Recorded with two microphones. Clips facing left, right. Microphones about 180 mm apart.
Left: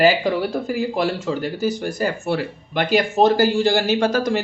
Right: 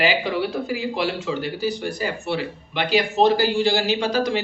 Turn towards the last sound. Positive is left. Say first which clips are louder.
# left 3 dB
turn(degrees=45)  # may be behind; listen again after turning